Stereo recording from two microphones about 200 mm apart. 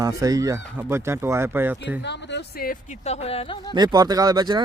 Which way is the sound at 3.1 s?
30° left (ahead or behind).